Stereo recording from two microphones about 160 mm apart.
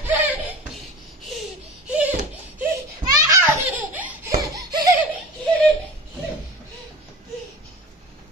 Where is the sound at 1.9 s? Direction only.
10° right (ahead or behind).